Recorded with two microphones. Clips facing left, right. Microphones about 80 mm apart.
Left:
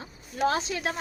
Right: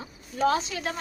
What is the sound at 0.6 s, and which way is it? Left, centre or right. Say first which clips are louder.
Speech: left 2 dB; left.